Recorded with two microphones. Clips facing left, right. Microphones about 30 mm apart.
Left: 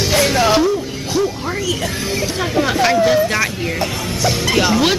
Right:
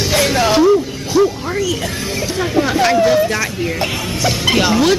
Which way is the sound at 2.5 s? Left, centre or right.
Centre.